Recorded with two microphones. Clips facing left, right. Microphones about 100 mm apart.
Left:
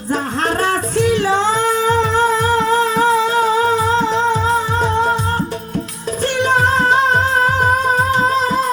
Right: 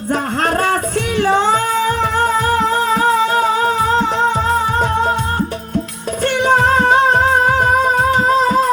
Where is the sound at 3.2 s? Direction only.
50° right (ahead or behind).